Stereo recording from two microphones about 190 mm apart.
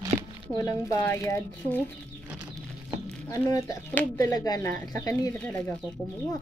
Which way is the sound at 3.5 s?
15° left (ahead or behind).